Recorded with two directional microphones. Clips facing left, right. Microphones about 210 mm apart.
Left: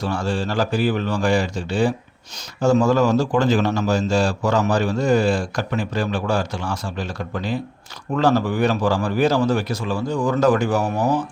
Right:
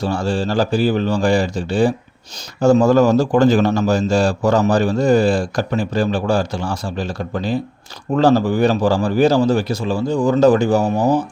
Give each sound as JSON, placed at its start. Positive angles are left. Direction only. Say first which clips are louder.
{"t": 0.0, "sound": "a man's voice", "louder": "right 4 dB", "side_deg": -30}